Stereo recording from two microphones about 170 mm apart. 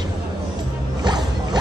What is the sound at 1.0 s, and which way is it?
Music, 25° right (ahead or behind).